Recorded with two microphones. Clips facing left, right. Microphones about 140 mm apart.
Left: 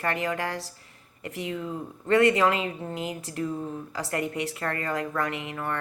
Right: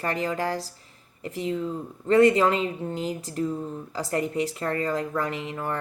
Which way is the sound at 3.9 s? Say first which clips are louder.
Right 4 dB; 35° right (ahead or behind).